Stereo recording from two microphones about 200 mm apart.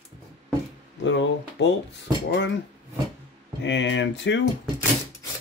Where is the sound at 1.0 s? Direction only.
65° left (ahead or behind).